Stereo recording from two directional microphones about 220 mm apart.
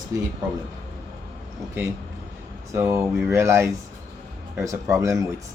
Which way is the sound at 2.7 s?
10° right (ahead or behind).